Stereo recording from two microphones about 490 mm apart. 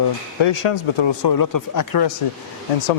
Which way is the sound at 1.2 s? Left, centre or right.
Left.